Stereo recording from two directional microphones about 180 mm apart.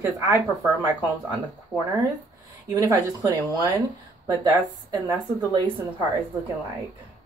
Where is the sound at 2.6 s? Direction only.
20° right (ahead or behind).